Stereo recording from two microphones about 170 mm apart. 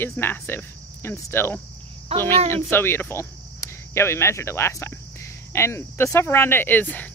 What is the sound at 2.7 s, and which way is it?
Speech, 15° left (ahead or behind).